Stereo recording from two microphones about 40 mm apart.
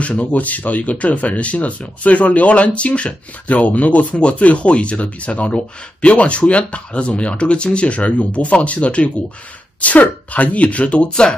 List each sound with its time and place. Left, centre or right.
0.0 s speech: left
11.1 s speech: centre